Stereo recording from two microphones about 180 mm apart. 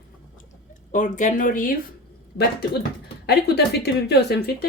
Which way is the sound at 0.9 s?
45° left (ahead or behind).